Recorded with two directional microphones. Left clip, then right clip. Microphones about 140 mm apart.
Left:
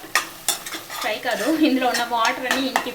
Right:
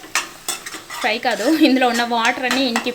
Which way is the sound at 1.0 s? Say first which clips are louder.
Right 5 dB; 90° right.